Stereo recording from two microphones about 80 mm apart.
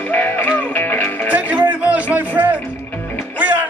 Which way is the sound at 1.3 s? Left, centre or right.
Centre.